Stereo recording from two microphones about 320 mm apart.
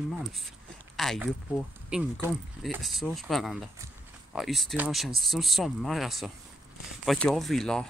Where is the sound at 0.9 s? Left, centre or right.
Centre.